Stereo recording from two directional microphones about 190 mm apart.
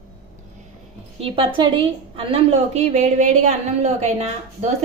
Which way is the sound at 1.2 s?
25° right (ahead or behind).